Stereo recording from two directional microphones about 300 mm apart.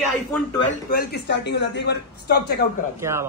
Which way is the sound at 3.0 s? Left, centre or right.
Centre.